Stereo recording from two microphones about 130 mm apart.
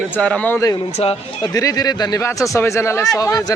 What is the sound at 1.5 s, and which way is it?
A man's voice, 30° left (ahead or behind).